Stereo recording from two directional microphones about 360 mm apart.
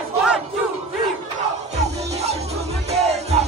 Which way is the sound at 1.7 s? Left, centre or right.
Centre.